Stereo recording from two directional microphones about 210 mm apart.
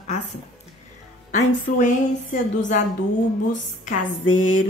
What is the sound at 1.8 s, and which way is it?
Speech, 35° left (ahead or behind).